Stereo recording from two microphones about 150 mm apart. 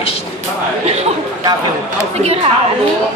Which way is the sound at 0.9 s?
45° right (ahead or behind).